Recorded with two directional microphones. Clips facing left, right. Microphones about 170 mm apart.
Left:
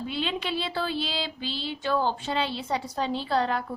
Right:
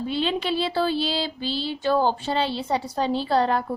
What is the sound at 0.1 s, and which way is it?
A woman's voice, 30° right (ahead or behind).